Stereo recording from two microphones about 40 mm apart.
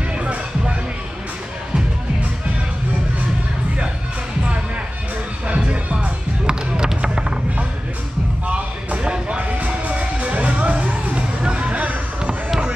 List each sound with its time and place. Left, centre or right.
0.1 s music: right
5.5 s music: right
8.5 s a sound: right
9.4 s music: right